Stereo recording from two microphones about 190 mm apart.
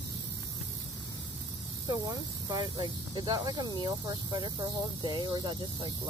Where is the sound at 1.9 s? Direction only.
20° right (ahead or behind).